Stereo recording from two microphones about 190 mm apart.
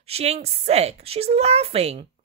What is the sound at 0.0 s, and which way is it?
Speech, 30° right (ahead or behind).